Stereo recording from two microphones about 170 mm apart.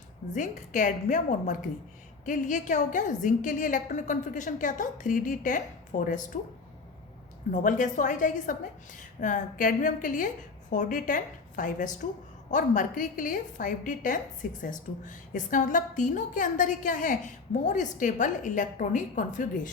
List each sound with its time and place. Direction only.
0.3 s a woman's voice: 45° left (ahead or behind)
7.5 s a woman's voice: 50° left (ahead or behind)